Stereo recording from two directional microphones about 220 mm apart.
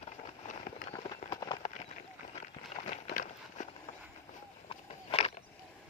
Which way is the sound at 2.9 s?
35° left (ahead or behind).